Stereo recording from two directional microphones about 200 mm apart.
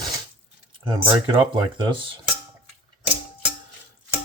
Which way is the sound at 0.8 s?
25° right (ahead or behind).